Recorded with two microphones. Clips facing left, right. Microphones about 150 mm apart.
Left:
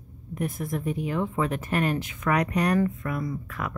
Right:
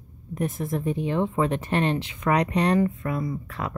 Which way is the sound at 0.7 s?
30° right (ahead or behind).